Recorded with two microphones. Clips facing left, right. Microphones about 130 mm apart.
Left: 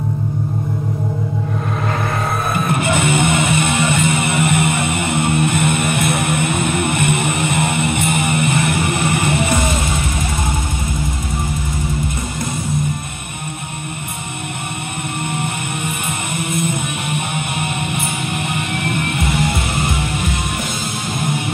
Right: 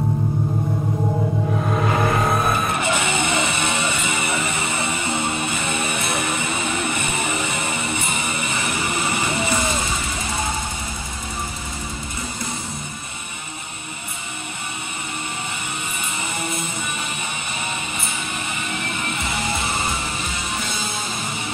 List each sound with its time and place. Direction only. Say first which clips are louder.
2.8 s music: left 5 dB; 55° left (ahead or behind)
15.2 s music: left 7 dB; 60° left (ahead or behind)